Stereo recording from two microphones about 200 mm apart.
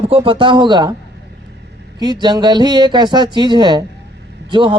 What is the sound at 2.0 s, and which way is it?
A man's voice, 20° right (ahead or behind).